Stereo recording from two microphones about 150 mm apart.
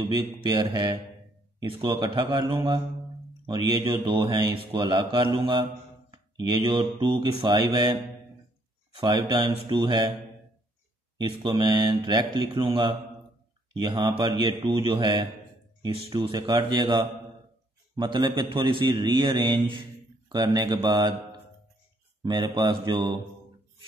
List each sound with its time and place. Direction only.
0.1 s a man's voice: 35° right (ahead or behind)
5.4 s mantra: 35° right (ahead or behind)
8.9 s a man's voice: 30° right (ahead or behind)
11.1 s a man's voice: 30° right (ahead or behind)